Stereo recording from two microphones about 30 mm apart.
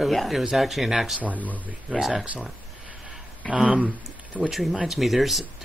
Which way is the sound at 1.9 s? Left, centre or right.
Right.